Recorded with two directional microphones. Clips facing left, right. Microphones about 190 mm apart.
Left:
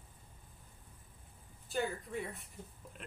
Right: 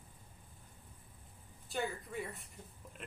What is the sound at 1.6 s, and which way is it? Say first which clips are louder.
Speech: left 2 dB; centre (ahead or behind).